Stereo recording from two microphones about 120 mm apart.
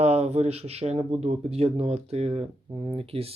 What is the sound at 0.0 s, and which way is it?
Speech, 60° right (ahead or behind).